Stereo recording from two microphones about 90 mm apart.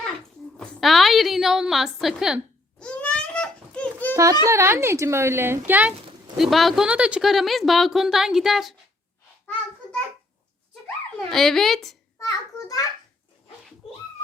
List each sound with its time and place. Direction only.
0.2 s a woman's voice: 10° left (ahead or behind)
2.7 s a sound: 10° left (ahead or behind)
4.1 s a child's voice: 35° right (ahead or behind); by 5.9 s 20° right (ahead or behind)
6.3 s speech: centre (ahead or behind)
6.8 s speech: 10° right (ahead or behind)
11.3 s speech: 5° left (ahead or behind)
12.2 s a sound: 40° left (ahead or behind)